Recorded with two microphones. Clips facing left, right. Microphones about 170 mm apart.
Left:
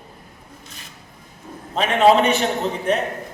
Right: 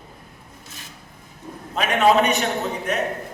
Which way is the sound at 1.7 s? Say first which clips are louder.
Left 2 dB; 30° left (ahead or behind).